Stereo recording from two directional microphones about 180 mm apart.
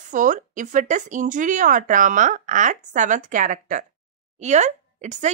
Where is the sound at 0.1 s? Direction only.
45° right (ahead or behind).